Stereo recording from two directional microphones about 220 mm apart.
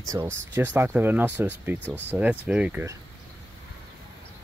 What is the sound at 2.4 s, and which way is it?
Speech, 5° right (ahead or behind).